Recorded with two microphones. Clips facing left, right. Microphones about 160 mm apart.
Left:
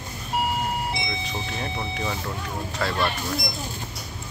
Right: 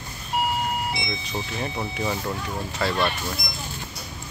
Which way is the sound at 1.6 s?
10° right (ahead or behind).